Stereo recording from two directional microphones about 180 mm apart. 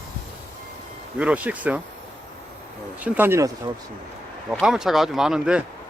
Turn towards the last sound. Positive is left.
turn(degrees=-5)  # may be behind; listen again after turning